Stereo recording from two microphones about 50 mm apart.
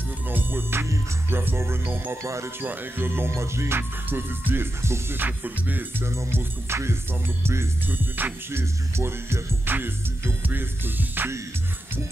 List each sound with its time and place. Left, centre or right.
0.3 s music: right
2.2 s speech: right
2.6 s music: right
5.1 s music: right
6.0 s music: right
7.9 s music: right
8.5 s music: right
9.7 s music: right